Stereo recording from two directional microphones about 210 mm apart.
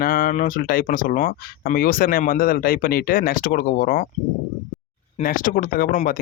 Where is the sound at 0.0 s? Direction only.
40° left (ahead or behind).